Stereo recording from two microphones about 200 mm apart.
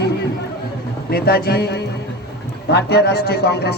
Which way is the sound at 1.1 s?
50° left (ahead or behind).